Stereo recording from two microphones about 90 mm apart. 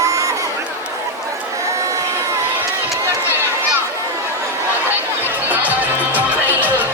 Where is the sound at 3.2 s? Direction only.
25° right (ahead or behind).